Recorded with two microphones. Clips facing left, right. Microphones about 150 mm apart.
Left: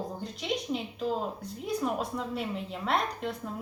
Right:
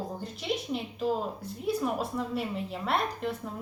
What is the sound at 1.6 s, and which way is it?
A woman's voice, 5° right (ahead or behind).